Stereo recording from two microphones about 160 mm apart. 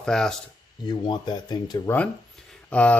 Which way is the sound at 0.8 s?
25° left (ahead or behind).